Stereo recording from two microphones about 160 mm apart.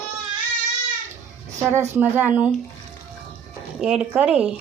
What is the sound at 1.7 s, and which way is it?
Speech, 15° right (ahead or behind).